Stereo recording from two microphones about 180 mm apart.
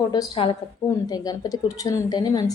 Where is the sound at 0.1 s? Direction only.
25° left (ahead or behind).